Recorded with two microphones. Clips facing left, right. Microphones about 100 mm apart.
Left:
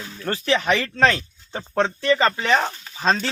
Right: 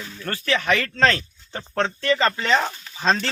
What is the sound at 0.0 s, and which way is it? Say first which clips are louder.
Speech: left 3 dB; 20° left (ahead or behind).